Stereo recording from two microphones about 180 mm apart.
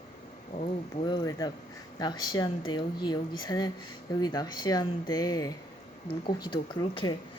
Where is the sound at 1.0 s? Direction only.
25° left (ahead or behind).